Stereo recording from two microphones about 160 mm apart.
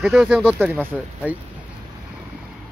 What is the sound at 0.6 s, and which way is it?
Speech, 10° right (ahead or behind).